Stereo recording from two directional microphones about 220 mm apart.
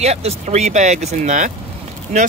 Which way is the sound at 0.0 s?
30° right (ahead or behind).